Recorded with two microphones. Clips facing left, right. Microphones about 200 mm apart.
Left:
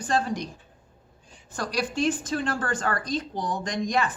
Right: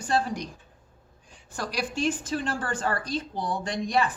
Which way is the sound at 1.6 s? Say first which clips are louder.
Left 2 dB; 10° right (ahead or behind).